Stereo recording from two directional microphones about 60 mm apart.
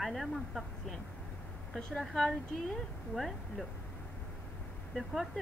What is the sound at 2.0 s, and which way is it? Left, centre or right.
Speech, centre.